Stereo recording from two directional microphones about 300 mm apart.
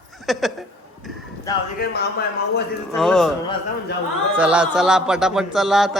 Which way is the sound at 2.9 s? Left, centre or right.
Centre.